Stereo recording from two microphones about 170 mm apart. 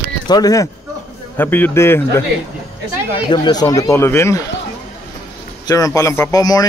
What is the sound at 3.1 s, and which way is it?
A man's voice, 25° left (ahead or behind).